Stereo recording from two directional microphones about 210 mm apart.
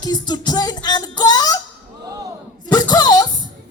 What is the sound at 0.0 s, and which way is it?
Music, 20° left (ahead or behind).